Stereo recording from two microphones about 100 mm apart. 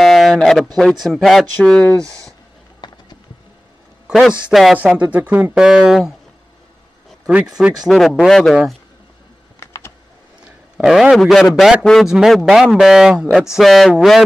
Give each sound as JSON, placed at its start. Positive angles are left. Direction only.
{"t": 0.0, "sound": "a sound", "side_deg": 0}
{"t": 1.0, "sound": "speech", "side_deg": 0}
{"t": 2.8, "sound": "a sound", "side_deg": 45}
{"t": 4.1, "sound": "speech", "side_deg": -5}
{"t": 7.6, "sound": "speech", "side_deg": -5}
{"t": 9.6, "sound": "typing", "side_deg": 25}
{"t": 10.4, "sound": "a man's voice", "side_deg": -5}